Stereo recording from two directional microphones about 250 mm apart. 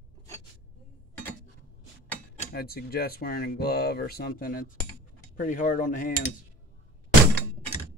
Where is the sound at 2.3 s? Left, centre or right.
Left.